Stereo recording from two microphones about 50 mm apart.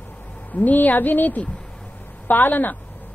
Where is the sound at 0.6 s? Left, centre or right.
Left.